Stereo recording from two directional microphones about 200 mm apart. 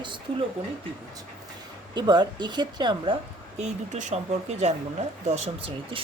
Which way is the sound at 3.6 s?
35° right (ahead or behind).